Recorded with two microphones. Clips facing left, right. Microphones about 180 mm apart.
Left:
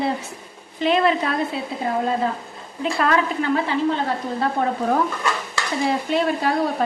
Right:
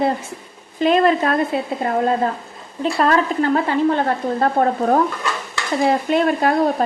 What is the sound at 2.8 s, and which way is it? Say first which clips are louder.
Speech: right 3 dB; 35° right (ahead or behind).